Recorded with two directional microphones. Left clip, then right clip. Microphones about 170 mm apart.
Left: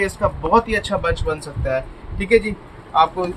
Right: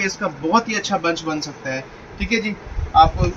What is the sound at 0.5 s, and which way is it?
A man's voice, 75° left (ahead or behind).